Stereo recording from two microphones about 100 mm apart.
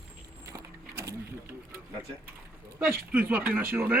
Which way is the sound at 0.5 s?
35° right (ahead or behind).